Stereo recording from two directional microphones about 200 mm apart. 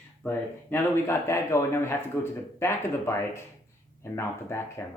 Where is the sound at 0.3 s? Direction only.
10° left (ahead or behind).